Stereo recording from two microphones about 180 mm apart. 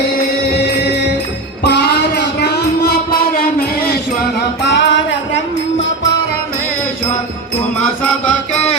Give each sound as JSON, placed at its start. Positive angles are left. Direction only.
{"t": 1.6, "sound": "music", "side_deg": 65}
{"t": 4.4, "sound": "music", "side_deg": 75}